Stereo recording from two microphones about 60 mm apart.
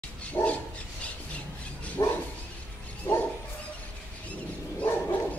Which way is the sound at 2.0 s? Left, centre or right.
Left.